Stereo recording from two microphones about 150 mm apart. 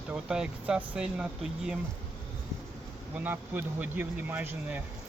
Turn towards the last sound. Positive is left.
turn(degrees=-10)  # may be behind; listen again after turning